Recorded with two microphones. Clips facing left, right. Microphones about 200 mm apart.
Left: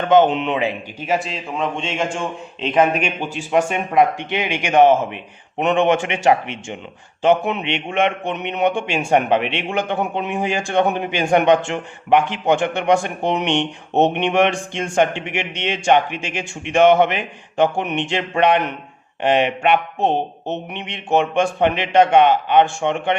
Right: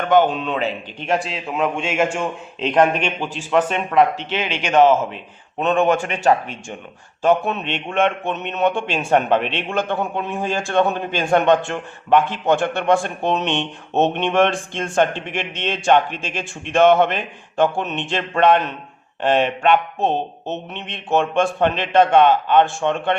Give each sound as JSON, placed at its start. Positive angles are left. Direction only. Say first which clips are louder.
{"t": 0.0, "sound": "speech", "louder": "left 2 dB", "side_deg": 20}
{"t": 1.0, "sound": "a man's voice", "louder": "even", "side_deg": 0}
{"t": 7.2, "sound": "a man's voice", "louder": "left 1 dB", "side_deg": 15}